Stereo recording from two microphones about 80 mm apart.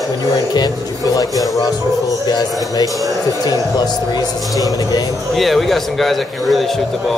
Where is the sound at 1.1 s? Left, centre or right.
Left.